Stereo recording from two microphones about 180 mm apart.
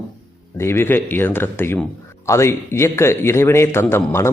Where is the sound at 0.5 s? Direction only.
15° left (ahead or behind).